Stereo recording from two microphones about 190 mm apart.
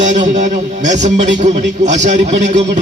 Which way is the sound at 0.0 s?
40° right (ahead or behind).